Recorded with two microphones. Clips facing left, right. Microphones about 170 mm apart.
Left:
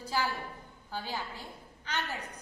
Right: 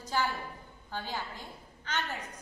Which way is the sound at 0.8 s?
10° left (ahead or behind).